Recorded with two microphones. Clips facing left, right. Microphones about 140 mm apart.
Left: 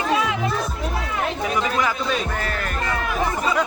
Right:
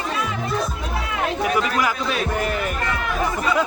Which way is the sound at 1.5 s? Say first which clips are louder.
Right 1 dB; 5° right (ahead or behind).